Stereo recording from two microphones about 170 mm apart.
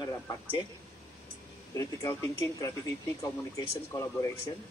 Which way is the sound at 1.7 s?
20° left (ahead or behind).